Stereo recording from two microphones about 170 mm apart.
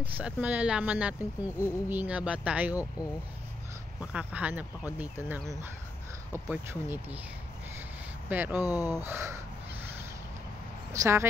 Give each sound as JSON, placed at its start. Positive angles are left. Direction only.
{"t": 0.0, "sound": "speech", "side_deg": -10}
{"t": 4.0, "sound": "speech", "side_deg": -5}
{"t": 8.3, "sound": "speech", "side_deg": -10}
{"t": 8.6, "sound": "speech", "side_deg": 20}
{"t": 9.0, "sound": "speech", "side_deg": -15}
{"t": 10.9, "sound": "speech", "side_deg": -15}